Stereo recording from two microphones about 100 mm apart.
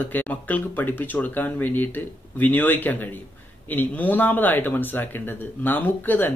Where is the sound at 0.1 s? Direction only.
15° left (ahead or behind).